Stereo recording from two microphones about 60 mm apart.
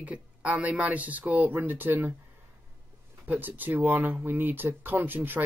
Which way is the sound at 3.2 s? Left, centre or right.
Right.